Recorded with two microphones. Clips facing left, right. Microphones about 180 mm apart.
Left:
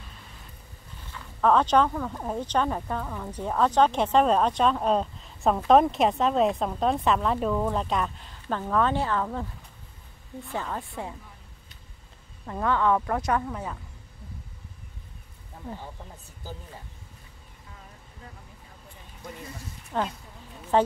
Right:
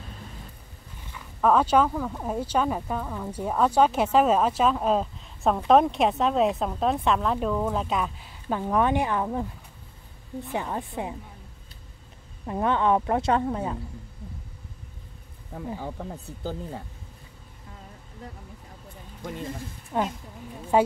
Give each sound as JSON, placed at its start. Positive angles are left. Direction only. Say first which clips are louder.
{"t": 1.1, "sound": "speech", "louder": "right 1 dB", "side_deg": -10}
{"t": 10.5, "sound": "speech", "louder": "right 2 dB", "side_deg": -15}
{"t": 12.4, "sound": "a woman's voice", "louder": "right 1 dB", "side_deg": -20}
{"t": 15.8, "sound": "speech", "louder": "right 8 dB", "side_deg": -60}
{"t": 19.9, "sound": "speech", "louder": "right 2 dB", "side_deg": -10}